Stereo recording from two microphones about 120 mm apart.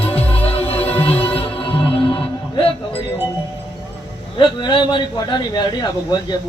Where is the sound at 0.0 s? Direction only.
55° left (ahead or behind).